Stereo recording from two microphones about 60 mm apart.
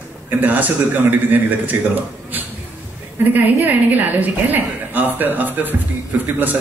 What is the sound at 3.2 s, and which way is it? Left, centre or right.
A woman's voice, right.